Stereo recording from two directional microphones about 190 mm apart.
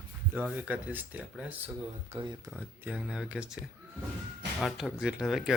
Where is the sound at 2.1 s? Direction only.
25° right (ahead or behind).